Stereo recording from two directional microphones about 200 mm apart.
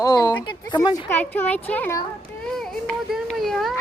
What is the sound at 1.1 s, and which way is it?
Speech, 10° left (ahead or behind).